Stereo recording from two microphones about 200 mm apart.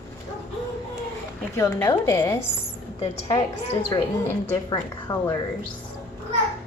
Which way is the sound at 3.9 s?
15° left (ahead or behind).